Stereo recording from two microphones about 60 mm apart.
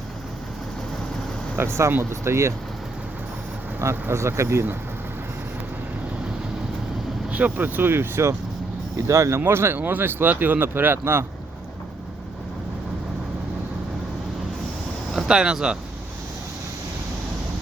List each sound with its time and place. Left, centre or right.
1.5 s speech: right
4.1 s speech: right
7.3 s speech: right
9.0 s speech: right
15.1 s speech: centre